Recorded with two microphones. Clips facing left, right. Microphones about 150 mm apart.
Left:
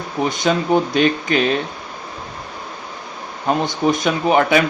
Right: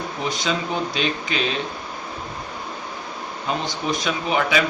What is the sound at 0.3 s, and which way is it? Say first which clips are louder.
A man's voice: left 7 dB; 50° left (ahead or behind).